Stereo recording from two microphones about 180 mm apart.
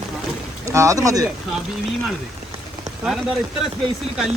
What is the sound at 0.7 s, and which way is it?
Speech, 15° right (ahead or behind).